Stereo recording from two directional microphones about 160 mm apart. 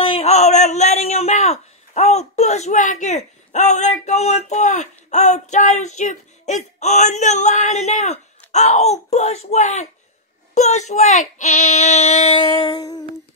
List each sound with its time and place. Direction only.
0.0 s speech: 40° left (ahead or behind)